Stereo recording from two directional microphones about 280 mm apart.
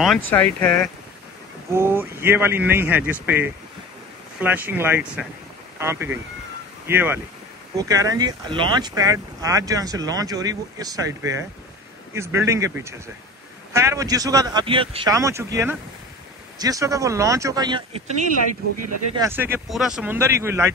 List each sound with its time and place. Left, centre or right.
0.3 s speech: centre
1.7 s speech: centre
18.4 s speech: right
19.1 s speech: centre